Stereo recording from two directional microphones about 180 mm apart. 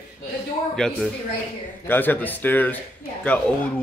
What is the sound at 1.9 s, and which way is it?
Speech, 10° left (ahead or behind).